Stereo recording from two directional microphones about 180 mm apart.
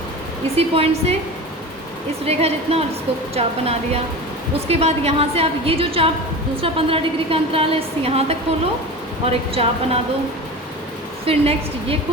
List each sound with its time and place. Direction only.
0.5 s a woman's voice: 35° right (ahead or behind)
2.2 s a woman's voice: 35° right (ahead or behind)
11.3 s a woman's voice: 35° right (ahead or behind)